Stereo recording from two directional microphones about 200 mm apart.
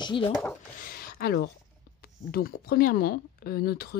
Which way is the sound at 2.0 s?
50° left (ahead or behind).